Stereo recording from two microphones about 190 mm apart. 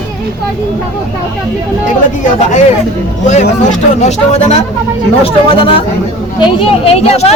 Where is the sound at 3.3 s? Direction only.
40° left (ahead or behind).